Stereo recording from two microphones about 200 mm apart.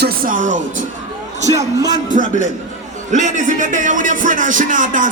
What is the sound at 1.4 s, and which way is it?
Speech, 15° right (ahead or behind).